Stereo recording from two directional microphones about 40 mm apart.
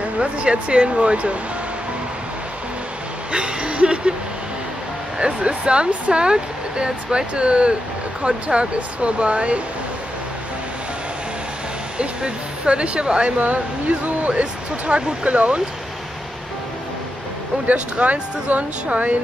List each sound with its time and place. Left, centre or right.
0.2 s speech: right
3.3 s speech: right
5.2 s speech: right
12.0 s speech: right
13.4 s speech: right
14.3 s speech: right
17.6 s speech: right